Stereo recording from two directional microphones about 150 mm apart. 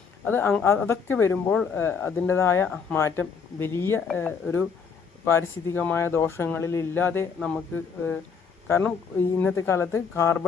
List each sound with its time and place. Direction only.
0.3 s speech: 10° left (ahead or behind)
8.6 s speech: 10° left (ahead or behind)